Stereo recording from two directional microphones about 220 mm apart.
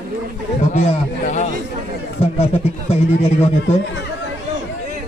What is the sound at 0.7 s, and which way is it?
A man's voice, 30° left (ahead or behind).